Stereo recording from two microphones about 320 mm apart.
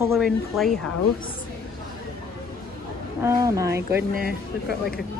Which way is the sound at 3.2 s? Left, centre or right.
Centre.